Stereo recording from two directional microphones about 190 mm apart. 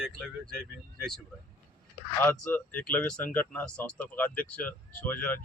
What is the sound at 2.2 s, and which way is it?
Speech, 10° left (ahead or behind).